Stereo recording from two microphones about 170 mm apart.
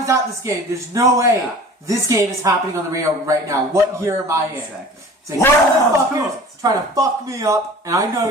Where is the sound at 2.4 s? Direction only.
20° right (ahead or behind).